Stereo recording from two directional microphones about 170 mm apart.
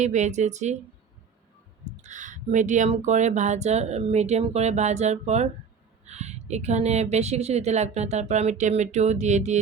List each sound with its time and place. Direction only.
0.0 s speech: 45° right (ahead or behind)
2.0 s speech: 45° right (ahead or behind)